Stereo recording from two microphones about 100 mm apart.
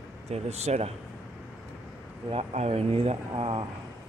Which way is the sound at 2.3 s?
90° right.